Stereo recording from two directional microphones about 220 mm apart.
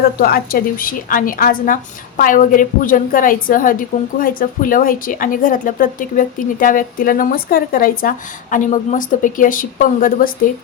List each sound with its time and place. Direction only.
0.2 s a woman's voice: 45° left (ahead or behind)